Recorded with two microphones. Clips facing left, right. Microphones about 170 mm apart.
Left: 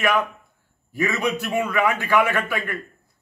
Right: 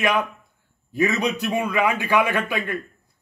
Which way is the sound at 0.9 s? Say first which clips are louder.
Right 2 dB; 15° right (ahead or behind).